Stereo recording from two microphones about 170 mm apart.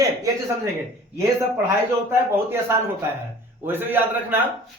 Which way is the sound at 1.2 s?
15° right (ahead or behind).